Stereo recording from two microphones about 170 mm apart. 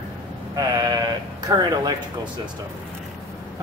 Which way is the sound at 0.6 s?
25° right (ahead or behind).